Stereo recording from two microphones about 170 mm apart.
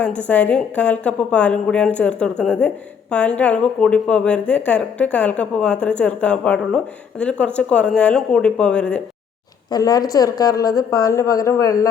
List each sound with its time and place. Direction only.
0.0 s a woman's voice: 10° left (ahead or behind)
9.6 s speech: 20° left (ahead or behind)